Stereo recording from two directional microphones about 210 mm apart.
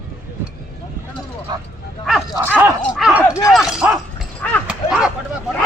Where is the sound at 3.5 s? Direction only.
Centre (ahead or behind).